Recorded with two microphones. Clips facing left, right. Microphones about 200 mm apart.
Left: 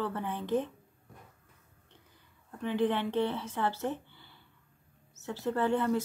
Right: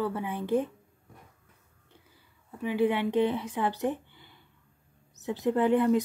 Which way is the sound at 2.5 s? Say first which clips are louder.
Right 3 dB; 10° right (ahead or behind).